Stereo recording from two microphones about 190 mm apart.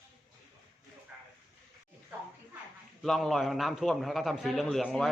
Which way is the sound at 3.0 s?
Centre (ahead or behind).